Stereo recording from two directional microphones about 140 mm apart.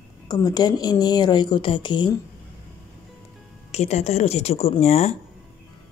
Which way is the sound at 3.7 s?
50° left (ahead or behind).